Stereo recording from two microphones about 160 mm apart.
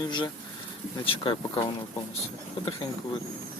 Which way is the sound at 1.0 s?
35° left (ahead or behind).